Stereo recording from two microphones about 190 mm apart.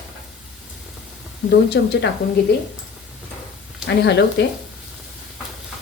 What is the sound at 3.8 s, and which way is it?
Speech, 65° left (ahead or behind).